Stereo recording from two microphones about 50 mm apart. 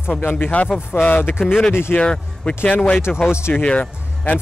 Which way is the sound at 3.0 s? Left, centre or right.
Left.